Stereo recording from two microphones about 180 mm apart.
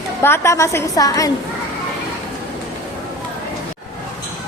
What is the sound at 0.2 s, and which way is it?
A woman's voice, 15° left (ahead or behind).